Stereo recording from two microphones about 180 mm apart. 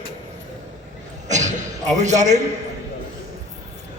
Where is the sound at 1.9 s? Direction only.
40° right (ahead or behind).